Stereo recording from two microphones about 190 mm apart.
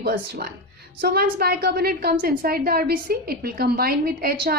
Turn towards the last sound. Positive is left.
turn(degrees=-50)  # may be behind; listen again after turning